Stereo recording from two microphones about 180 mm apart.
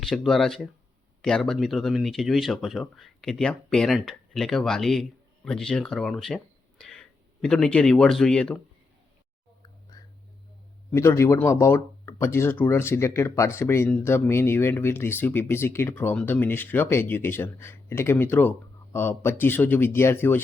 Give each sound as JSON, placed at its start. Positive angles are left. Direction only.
{"t": 0.0, "sound": "speech", "side_deg": 0}
{"t": 10.9, "sound": "speech", "side_deg": 15}